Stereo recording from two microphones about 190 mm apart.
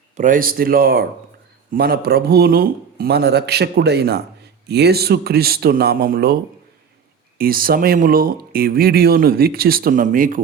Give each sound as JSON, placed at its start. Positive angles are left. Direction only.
{"t": 0.2, "sound": "a man's voice", "side_deg": -45}
{"t": 7.3, "sound": "speech", "side_deg": -50}